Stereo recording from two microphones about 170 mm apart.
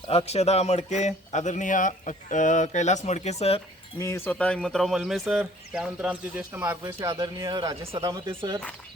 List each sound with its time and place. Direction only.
0.1 s a man's voice: 35° left (ahead or behind)
4.0 s speech: 15° left (ahead or behind); by 8.5 s 30° right (ahead or behind)